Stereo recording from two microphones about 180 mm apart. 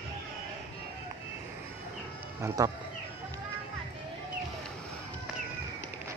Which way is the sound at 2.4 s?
15° right (ahead or behind).